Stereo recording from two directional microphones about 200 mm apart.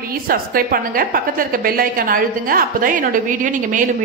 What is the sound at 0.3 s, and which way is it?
A woman's voice, 45° right (ahead or behind).